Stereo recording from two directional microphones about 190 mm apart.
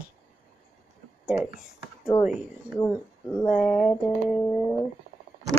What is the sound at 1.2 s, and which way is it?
Speech, 5° right (ahead or behind).